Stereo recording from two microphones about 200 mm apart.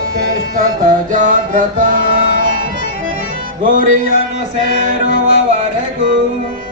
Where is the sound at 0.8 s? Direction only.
40° right (ahead or behind).